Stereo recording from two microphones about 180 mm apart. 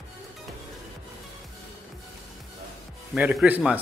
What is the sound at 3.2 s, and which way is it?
Speech, 10° right (ahead or behind).